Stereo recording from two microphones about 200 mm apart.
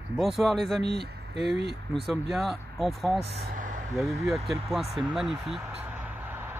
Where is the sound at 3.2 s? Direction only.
40° right (ahead or behind).